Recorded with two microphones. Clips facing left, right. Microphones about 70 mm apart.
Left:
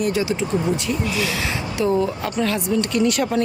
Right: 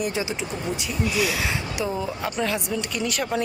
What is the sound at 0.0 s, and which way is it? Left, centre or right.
Speech, centre.